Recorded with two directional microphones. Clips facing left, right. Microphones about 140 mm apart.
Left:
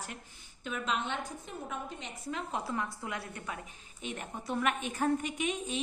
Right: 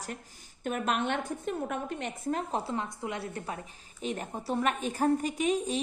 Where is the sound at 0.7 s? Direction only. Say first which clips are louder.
Right 5 dB; 55° right (ahead or behind).